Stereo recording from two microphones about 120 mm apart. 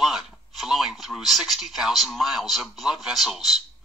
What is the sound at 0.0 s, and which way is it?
Speech, centre (ahead or behind).